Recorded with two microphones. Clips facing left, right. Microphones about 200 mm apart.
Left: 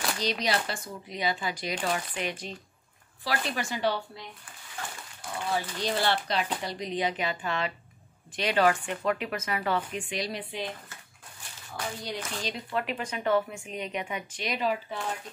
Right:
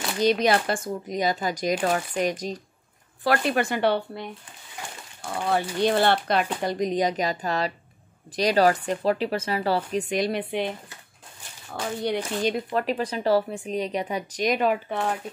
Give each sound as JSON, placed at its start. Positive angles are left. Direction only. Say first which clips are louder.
{"t": 0.2, "sound": "speech", "louder": "right 10 dB", "side_deg": -55}
{"t": 3.3, "sound": "speech", "louder": "right 9 dB", "side_deg": -60}
{"t": 4.8, "sound": "dog", "louder": "even", "side_deg": -15}
{"t": 5.2, "sound": "speech", "louder": "right 6 dB", "side_deg": -60}
{"t": 11.7, "sound": "speech", "louder": "right 4 dB", "side_deg": -60}
{"t": 12.7, "sound": "speech", "louder": "right 6 dB", "side_deg": -35}